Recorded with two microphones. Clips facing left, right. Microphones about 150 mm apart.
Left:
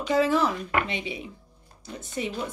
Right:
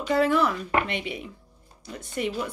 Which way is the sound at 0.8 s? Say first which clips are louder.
Right 1 dB; 60° right (ahead or behind).